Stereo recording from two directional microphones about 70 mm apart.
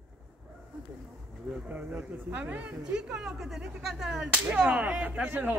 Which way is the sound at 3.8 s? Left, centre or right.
Centre.